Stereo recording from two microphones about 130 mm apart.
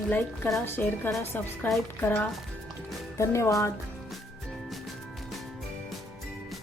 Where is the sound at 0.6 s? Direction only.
15° left (ahead or behind).